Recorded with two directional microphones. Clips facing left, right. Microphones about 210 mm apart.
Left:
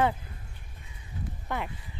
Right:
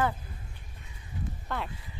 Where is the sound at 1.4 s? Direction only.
15° left (ahead or behind).